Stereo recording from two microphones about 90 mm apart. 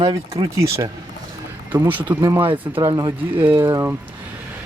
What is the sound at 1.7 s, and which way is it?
Speech, 20° right (ahead or behind).